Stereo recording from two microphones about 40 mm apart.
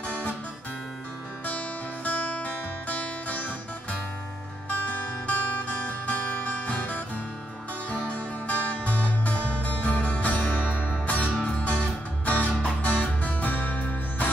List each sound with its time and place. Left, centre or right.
2.0 s music: left
4.6 s music: left